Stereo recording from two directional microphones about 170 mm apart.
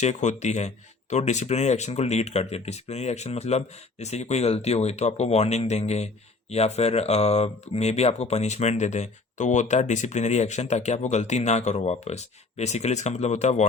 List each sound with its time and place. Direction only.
0.0 s speech: 45° left (ahead or behind)